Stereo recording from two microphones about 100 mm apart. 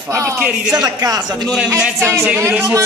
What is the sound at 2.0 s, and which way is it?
Speech, 30° right (ahead or behind).